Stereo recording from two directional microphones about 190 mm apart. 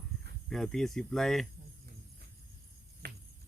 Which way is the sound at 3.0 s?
55° right (ahead or behind).